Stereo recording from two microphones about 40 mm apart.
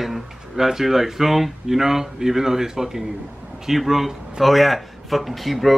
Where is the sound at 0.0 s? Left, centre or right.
Centre.